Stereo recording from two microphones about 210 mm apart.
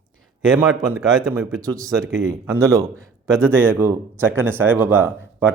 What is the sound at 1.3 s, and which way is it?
A man's voice, 15° right (ahead or behind).